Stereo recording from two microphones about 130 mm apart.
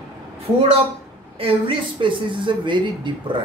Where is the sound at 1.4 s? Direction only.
40° right (ahead or behind).